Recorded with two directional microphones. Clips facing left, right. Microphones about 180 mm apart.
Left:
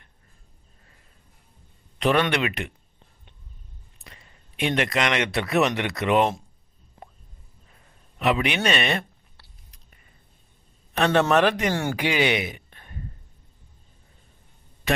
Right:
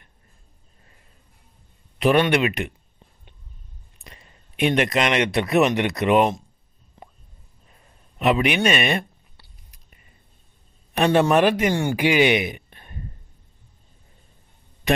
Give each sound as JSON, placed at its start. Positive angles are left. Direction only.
{"t": 2.0, "sound": "speech", "side_deg": -15}
{"t": 4.0, "sound": "a man's voice", "side_deg": -15}
{"t": 8.2, "sound": "speech", "side_deg": -20}
{"t": 9.4, "sound": "biting", "side_deg": -10}
{"t": 10.9, "sound": "speech", "side_deg": -15}